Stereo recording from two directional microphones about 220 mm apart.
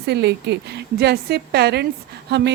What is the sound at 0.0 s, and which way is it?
Speech, 50° right (ahead or behind).